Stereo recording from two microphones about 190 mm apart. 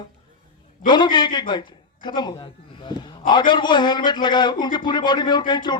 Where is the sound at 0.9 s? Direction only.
25° left (ahead or behind).